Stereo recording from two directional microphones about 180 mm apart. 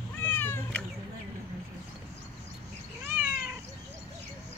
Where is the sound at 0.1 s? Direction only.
10° left (ahead or behind).